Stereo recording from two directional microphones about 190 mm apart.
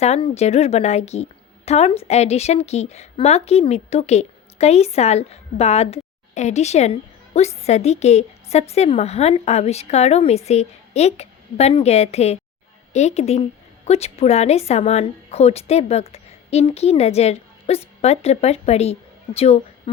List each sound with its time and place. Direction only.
0.0 s a woman's voice: 35° left (ahead or behind)